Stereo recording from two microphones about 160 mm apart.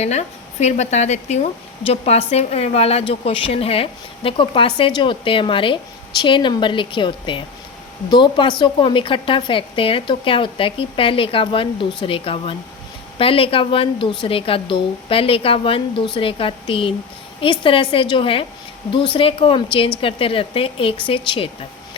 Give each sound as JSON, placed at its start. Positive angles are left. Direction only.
{"t": 0.0, "sound": "a woman's voice", "side_deg": 45}